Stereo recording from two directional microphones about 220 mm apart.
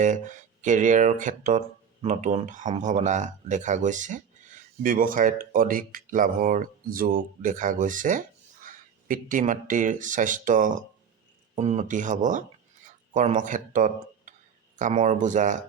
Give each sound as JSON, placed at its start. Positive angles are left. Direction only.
{"t": 0.0, "sound": "speech", "side_deg": -35}